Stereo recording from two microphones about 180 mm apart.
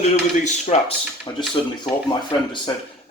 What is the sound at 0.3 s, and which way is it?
A man's voice, 40° left (ahead or behind).